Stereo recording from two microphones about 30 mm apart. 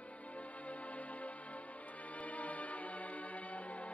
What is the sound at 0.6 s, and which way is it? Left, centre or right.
Music, left.